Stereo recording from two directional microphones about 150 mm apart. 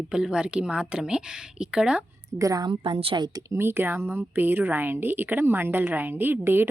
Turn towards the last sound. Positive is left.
turn(degrees=-15)  # may be behind; listen again after turning